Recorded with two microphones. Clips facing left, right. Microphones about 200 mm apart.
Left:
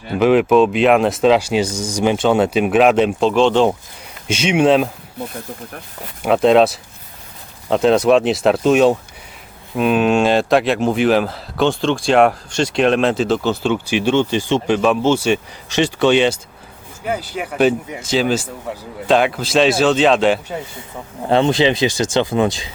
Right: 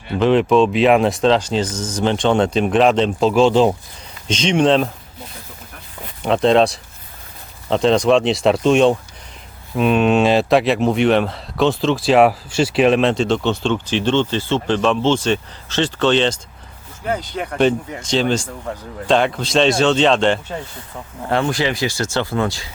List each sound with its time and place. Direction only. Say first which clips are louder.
0.2 s speech: left 2 dB; 5° left (ahead or behind)
3.2 s speech: even; 5° right (ahead or behind)
4.3 s speech: left 1 dB; 10° left (ahead or behind)
6.2 s speech: left 2 dB; 5° left (ahead or behind)
21.2 s speech: left 5 dB; 20° left (ahead or behind)